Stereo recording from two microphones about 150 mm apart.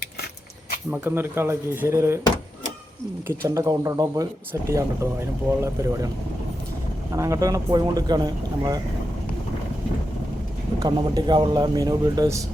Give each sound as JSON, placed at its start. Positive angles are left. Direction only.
{"t": 0.9, "sound": "speech", "side_deg": -15}
{"t": 3.2, "sound": "speech", "side_deg": -20}
{"t": 7.1, "sound": "speech", "side_deg": -20}
{"t": 10.8, "sound": "speech", "side_deg": -25}